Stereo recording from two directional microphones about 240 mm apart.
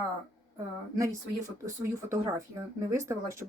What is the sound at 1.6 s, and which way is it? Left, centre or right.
Speech, centre.